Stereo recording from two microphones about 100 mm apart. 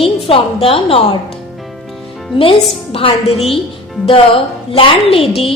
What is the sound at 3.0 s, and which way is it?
A woman's voice, 70° left (ahead or behind).